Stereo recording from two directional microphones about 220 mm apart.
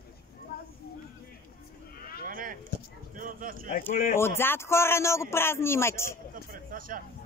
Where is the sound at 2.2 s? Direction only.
40° right (ahead or behind).